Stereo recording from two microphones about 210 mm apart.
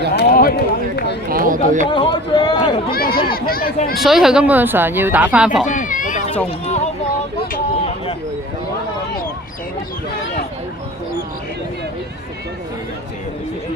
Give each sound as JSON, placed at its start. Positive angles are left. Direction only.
{"t": 0.2, "sound": "run", "side_deg": 45}
{"t": 1.3, "sound": "speech", "side_deg": -40}
{"t": 1.9, "sound": "speech", "side_deg": 20}
{"t": 2.9, "sound": "speech", "side_deg": 45}
{"t": 3.9, "sound": "speech", "side_deg": 0}
{"t": 5.6, "sound": "a sound", "side_deg": 40}